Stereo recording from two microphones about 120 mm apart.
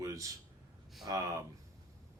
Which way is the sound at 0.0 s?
25° right (ahead or behind).